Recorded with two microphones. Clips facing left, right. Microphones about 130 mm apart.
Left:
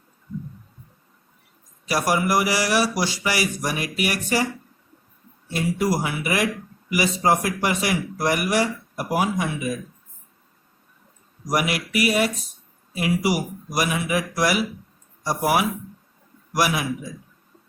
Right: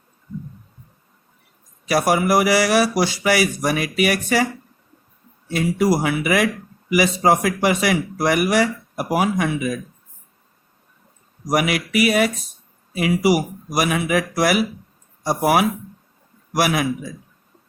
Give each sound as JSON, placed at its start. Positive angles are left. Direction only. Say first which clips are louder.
{"t": 1.9, "sound": "a man's voice", "louder": "right 4 dB", "side_deg": -65}
{"t": 5.5, "sound": "speech", "louder": "right 4 dB", "side_deg": -90}
{"t": 11.4, "sound": "a man's voice", "louder": "right 4 dB", "side_deg": -65}